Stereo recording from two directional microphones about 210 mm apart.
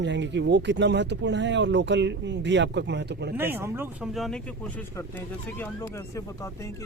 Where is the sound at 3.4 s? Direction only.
10° right (ahead or behind).